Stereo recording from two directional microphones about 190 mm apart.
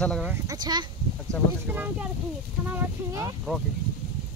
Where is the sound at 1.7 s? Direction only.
10° right (ahead or behind).